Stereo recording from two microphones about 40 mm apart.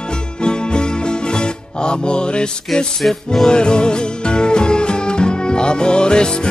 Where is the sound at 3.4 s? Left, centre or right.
Left.